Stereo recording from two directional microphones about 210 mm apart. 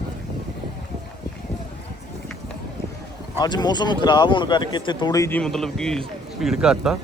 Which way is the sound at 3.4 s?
20° left (ahead or behind).